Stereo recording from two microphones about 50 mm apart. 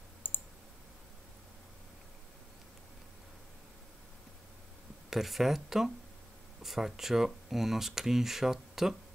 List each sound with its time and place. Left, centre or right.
0.2 s clicking: left
5.1 s speech: centre